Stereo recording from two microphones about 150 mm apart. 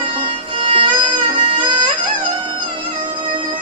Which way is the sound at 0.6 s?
35° right (ahead or behind).